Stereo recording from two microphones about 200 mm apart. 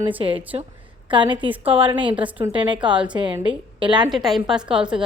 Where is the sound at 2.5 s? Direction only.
25° right (ahead or behind).